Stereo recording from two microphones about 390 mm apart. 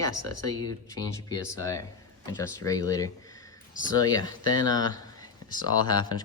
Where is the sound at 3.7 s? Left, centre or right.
Centre.